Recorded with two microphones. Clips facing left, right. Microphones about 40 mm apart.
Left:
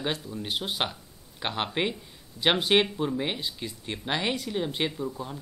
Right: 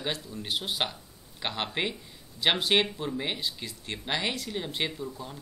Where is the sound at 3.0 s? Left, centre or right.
Centre.